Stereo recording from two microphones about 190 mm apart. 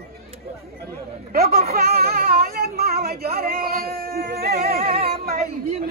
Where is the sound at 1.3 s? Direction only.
50° right (ahead or behind).